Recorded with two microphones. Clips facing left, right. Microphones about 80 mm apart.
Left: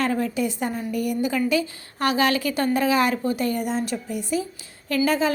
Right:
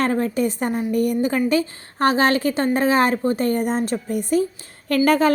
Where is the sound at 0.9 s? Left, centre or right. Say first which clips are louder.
Right 4 dB; right.